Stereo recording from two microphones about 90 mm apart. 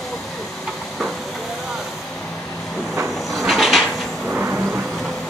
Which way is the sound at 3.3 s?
Centre (ahead or behind).